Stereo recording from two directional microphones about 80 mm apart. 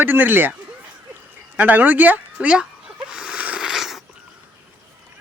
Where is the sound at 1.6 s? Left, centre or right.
Right.